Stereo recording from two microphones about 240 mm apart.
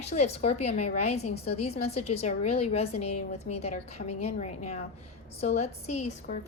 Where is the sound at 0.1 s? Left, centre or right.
Left.